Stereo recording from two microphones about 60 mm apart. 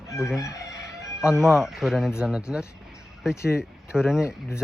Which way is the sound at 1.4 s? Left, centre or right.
Centre.